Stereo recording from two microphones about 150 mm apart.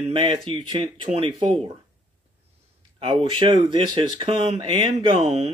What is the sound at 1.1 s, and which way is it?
Speech, 60° right (ahead or behind).